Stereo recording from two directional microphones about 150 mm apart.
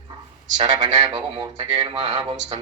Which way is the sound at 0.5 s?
30° right (ahead or behind).